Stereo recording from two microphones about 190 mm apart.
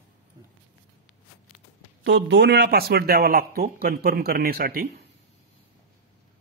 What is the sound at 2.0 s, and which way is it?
Speech, 65° right (ahead or behind).